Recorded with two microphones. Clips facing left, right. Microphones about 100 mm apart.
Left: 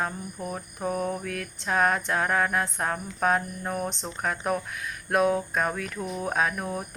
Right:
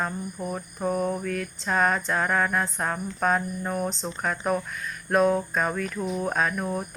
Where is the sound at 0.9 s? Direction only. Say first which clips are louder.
Right 2 dB; 15° right (ahead or behind).